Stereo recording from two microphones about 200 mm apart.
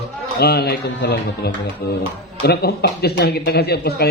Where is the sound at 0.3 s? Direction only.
55° left (ahead or behind).